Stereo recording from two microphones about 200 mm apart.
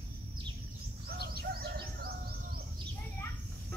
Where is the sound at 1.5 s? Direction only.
50° right (ahead or behind).